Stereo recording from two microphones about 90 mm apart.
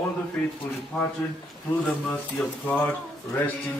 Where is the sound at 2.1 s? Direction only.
15° left (ahead or behind).